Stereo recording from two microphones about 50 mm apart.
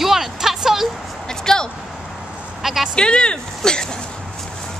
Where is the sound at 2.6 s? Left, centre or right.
Centre.